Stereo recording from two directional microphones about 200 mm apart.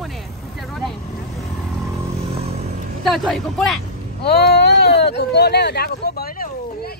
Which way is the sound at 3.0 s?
Centre (ahead or behind).